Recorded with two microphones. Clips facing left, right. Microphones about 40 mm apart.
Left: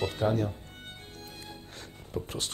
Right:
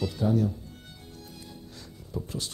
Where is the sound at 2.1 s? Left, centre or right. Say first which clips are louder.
Even; left.